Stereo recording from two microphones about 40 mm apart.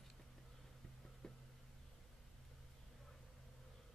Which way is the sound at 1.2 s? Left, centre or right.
Centre.